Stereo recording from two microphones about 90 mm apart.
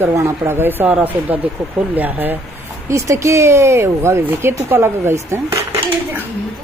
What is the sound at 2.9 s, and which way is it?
Speech, 35° right (ahead or behind).